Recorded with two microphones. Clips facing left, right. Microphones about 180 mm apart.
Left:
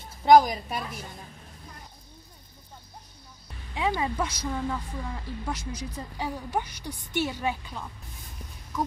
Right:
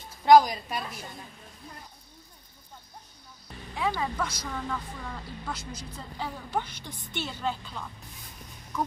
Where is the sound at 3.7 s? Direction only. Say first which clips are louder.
Left 2 dB; 15° left (ahead or behind).